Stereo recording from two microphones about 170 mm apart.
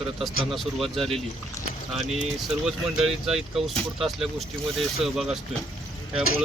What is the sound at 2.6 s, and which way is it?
Speech, centre (ahead or behind).